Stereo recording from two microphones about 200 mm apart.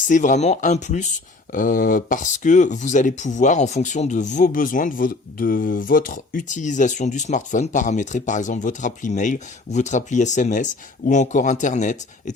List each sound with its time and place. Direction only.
0.1 s speech: 40° left (ahead or behind)